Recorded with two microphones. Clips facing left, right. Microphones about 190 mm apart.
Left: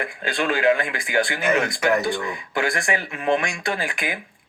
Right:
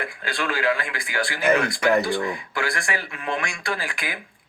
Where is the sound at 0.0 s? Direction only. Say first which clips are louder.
Left 3 dB; 20° left (ahead or behind).